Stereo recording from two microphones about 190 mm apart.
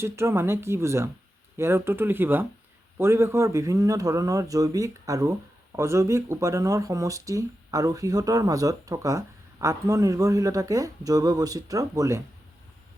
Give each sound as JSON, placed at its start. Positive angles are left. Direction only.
{"t": 0.0, "sound": "speech", "side_deg": -15}